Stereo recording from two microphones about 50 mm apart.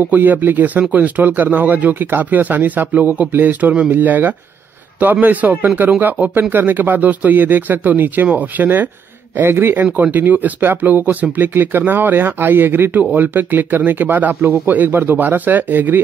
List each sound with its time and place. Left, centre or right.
0.1 s speech: right
9.4 s speech: right
10.1 s speech: right